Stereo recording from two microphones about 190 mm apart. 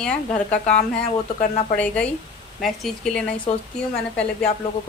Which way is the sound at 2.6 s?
Centre (ahead or behind).